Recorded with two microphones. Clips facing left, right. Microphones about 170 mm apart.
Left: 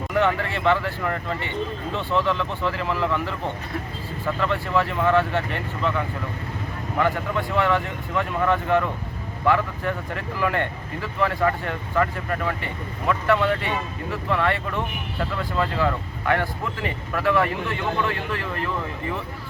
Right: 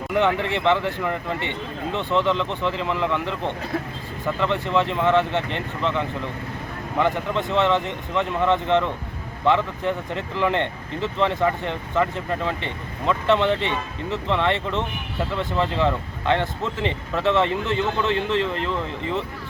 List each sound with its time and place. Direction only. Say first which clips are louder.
0.1 s speech: right 2 dB; 15° right (ahead or behind)